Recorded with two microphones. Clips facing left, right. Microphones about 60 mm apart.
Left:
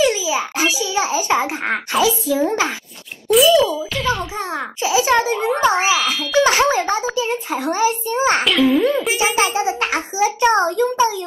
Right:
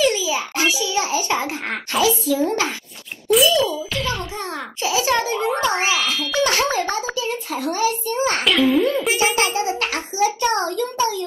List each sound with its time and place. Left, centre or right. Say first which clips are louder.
0.0 s a sound: left 2 dB; left
0.7 s a child's voice: left 2 dB; left
3.3 s a child's voice: left 4 dB; centre
4.8 s a child's voice: left 4 dB; left
8.5 s a child's voice: left 2 dB; centre
9.1 s a child's voice: left 1 dB; centre